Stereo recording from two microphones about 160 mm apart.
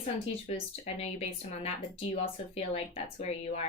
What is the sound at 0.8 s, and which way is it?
Speech, 40° left (ahead or behind).